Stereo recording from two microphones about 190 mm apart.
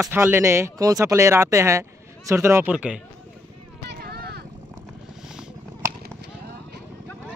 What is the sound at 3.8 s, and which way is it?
Vehicle, 55° right (ahead or behind).